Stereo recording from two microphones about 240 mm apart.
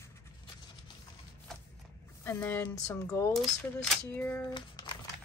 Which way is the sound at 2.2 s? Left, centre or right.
Centre.